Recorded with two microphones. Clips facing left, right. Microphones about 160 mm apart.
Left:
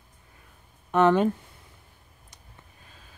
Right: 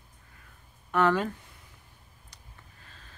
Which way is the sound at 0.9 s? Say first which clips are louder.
Left 5 dB; 20° left (ahead or behind).